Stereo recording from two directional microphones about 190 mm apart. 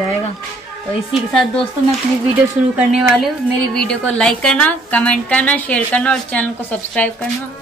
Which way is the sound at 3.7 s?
5° left (ahead or behind).